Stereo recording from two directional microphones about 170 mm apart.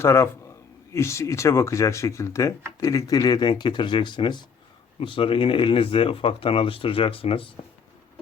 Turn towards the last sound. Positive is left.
turn(degrees=30)  # may be behind; listen again after turning